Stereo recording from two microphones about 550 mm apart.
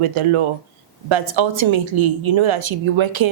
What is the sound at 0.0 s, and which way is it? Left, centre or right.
A woman's voice, right.